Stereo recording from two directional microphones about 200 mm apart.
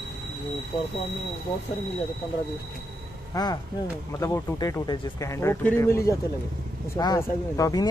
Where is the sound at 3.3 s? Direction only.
20° left (ahead or behind).